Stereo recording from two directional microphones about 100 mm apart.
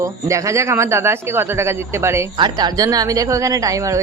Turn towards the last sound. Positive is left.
turn(degrees=-35)  # may be behind; listen again after turning